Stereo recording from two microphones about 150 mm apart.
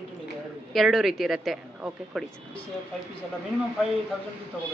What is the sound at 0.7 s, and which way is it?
Speech, centre (ahead or behind).